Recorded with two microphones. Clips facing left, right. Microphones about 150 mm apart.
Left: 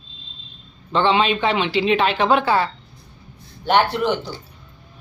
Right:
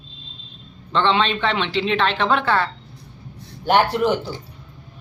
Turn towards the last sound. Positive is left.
turn(degrees=-5)  # may be behind; listen again after turning